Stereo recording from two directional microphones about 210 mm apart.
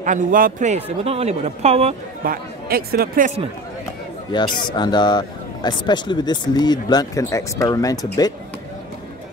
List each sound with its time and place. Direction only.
0.0 s speech: 40° right (ahead or behind)
2.2 s speech: 45° right (ahead or behind)
4.3 s speech: 20° left (ahead or behind)